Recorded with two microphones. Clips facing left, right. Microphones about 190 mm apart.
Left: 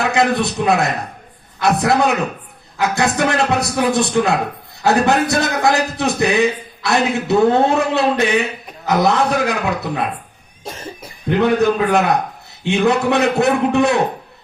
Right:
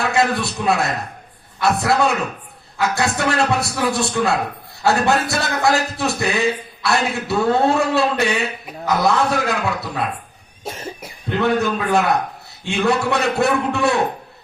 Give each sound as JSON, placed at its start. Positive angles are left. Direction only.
{"t": 0.0, "sound": "a man's voice", "side_deg": 20}
{"t": 10.6, "sound": "cough", "side_deg": -10}
{"t": 11.6, "sound": "a man's voice", "side_deg": 20}